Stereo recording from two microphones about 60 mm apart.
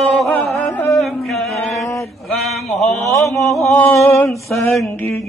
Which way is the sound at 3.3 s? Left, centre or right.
Left.